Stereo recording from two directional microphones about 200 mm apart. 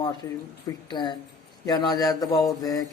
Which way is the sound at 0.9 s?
20° left (ahead or behind).